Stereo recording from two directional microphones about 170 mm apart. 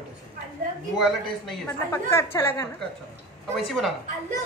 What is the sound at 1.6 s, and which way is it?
A woman's voice, 15° left (ahead or behind).